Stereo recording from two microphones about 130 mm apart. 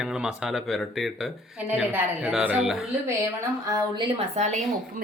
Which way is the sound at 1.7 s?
10° right (ahead or behind).